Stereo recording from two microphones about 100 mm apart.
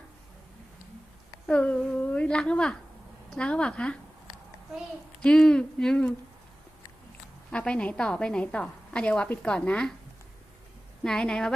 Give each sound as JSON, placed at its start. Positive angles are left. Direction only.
{"t": 1.5, "sound": "a woman's voice", "side_deg": 15}
{"t": 5.2, "sound": "a woman's voice", "side_deg": 10}
{"t": 7.5, "sound": "a woman's voice", "side_deg": 10}
{"t": 11.0, "sound": "a woman's voice", "side_deg": 5}